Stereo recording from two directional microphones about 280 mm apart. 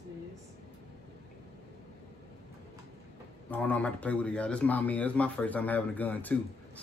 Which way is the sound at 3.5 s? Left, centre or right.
Centre.